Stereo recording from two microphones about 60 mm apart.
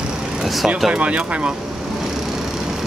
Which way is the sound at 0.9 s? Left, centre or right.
Centre.